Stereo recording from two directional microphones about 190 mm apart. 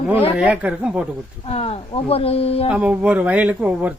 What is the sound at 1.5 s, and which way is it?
Speech, 30° left (ahead or behind).